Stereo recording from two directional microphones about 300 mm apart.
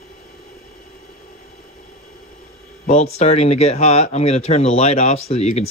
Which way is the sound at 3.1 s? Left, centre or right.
Left.